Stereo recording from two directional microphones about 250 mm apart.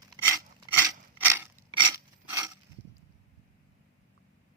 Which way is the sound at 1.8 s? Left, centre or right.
Centre.